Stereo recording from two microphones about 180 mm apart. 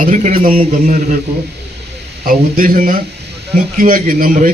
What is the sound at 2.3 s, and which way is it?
A man's voice, 50° right (ahead or behind).